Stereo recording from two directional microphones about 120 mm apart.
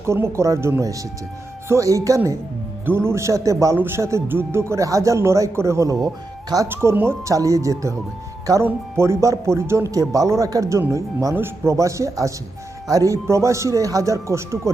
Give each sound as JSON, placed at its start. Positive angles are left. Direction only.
{"t": 0.0, "sound": "speech", "side_deg": -20}